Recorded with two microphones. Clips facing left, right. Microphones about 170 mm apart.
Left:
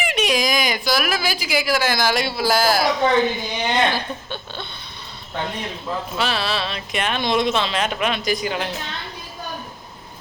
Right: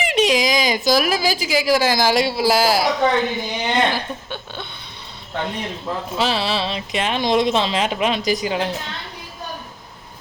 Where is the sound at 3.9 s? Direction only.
15° right (ahead or behind).